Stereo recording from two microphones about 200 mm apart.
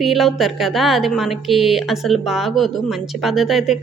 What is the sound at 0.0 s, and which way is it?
A woman's voice, centre (ahead or behind).